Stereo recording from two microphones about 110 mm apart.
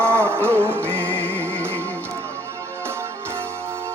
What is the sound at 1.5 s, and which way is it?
Music, 20° right (ahead or behind).